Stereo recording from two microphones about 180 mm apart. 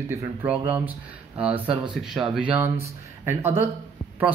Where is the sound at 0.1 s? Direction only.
10° right (ahead or behind).